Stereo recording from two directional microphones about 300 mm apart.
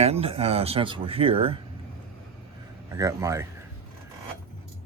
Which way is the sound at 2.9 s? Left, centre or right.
Centre.